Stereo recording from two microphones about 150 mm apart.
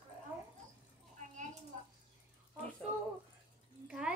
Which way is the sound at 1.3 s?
50° right (ahead or behind).